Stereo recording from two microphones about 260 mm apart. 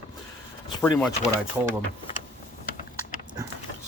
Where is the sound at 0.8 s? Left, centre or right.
Centre.